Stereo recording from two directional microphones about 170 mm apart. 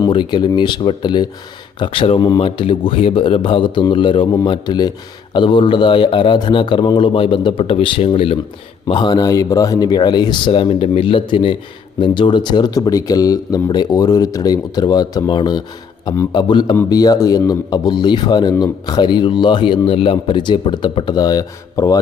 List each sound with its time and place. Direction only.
0.0 s a man's voice: 25° left (ahead or behind)